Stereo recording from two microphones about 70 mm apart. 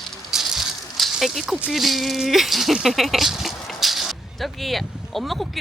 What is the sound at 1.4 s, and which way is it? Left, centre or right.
Speech, centre.